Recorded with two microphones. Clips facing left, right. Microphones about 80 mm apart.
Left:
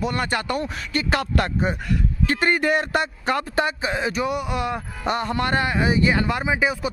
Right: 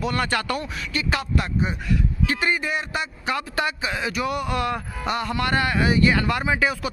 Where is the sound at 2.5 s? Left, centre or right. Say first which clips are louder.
Left 5 dB; left; by 4.8 s centre.